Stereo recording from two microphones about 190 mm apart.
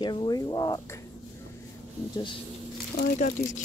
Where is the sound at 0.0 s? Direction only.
20° left (ahead or behind).